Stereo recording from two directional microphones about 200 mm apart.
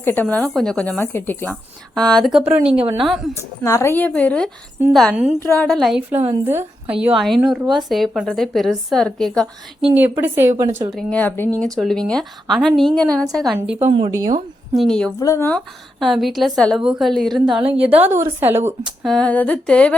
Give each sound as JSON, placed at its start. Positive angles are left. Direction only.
{"t": 0.0, "sound": "a woman's voice", "side_deg": 10}
{"t": 3.3, "sound": "a woman's voice", "side_deg": 15}
{"t": 5.4, "sound": "a woman's voice", "side_deg": 10}
{"t": 9.9, "sound": "a woman's voice", "side_deg": -10}
{"t": 10.9, "sound": "a woman's voice", "side_deg": 10}
{"t": 13.7, "sound": "a woman's voice", "side_deg": -30}
{"t": 14.7, "sound": "a woman's voice", "side_deg": 0}
{"t": 15.2, "sound": "a woman's voice", "side_deg": 15}
{"t": 19.0, "sound": "a woman's voice", "side_deg": 5}